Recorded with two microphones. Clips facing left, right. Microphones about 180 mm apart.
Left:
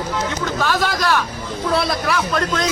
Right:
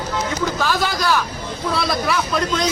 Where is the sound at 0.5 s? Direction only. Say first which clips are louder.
Left 1 dB; centre (ahead or behind).